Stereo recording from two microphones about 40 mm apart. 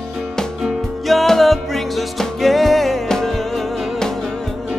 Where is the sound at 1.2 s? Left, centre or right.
Centre.